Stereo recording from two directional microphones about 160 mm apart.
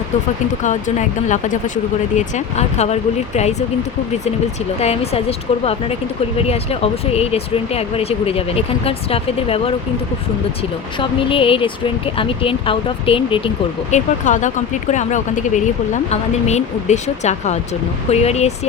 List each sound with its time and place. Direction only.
0.6 s speech: 50° left (ahead or behind)
4.8 s speech: 40° left (ahead or behind)
6.4 s speech: 40° left (ahead or behind)
11.0 s speech: 35° left (ahead or behind)
13.9 s speech: 50° left (ahead or behind)